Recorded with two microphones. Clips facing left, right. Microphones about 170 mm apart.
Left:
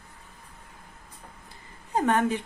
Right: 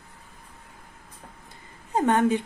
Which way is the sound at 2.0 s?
20° right (ahead or behind).